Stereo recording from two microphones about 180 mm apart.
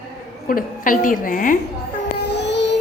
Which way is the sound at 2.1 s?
70° left (ahead or behind).